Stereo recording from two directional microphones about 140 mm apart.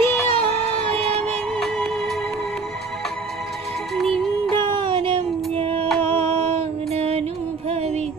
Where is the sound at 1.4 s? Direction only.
5° left (ahead or behind).